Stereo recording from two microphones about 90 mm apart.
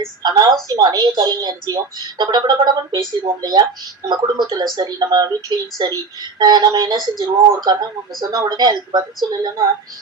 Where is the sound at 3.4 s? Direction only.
50° right (ahead or behind).